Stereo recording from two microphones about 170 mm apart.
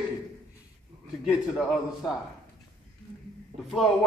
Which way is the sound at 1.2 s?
5° right (ahead or behind).